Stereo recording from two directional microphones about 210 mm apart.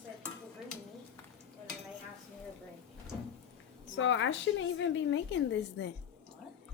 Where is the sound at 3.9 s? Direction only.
65° left (ahead or behind).